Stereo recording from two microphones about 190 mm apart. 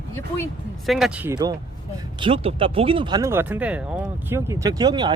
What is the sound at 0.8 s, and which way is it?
Speech, centre (ahead or behind).